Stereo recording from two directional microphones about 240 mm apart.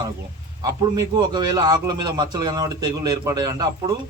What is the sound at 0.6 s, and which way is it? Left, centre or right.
A man's voice, centre.